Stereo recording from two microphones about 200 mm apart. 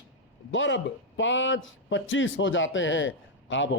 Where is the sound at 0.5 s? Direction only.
65° left (ahead or behind).